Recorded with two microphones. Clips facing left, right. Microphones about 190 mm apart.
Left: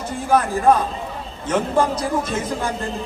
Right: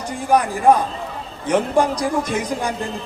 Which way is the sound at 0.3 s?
15° right (ahead or behind).